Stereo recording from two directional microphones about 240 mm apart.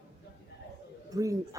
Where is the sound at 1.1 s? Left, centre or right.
Centre.